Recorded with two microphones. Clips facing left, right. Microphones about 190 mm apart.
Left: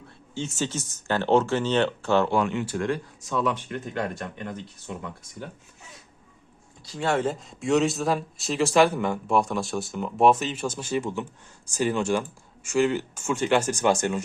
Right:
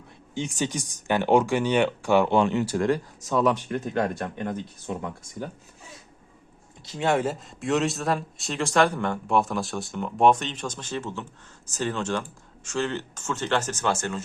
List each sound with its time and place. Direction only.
0.3 s speech: 15° right (ahead or behind)
2.4 s speech: 40° right (ahead or behind)
6.8 s speech: 20° right (ahead or behind)
7.3 s speech: centre (ahead or behind); by 14.2 s 15° left (ahead or behind)